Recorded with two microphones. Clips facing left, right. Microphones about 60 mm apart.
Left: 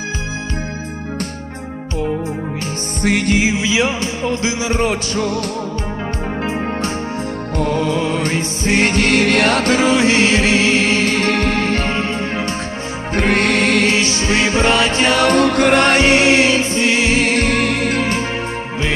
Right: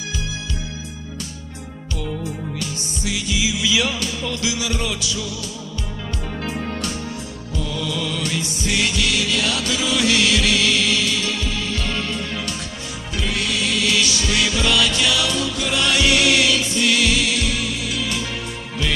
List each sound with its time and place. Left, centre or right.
3.0 s music: left
6.4 s music: left
7.5 s music: left
13.1 s music: left
13.9 s music: left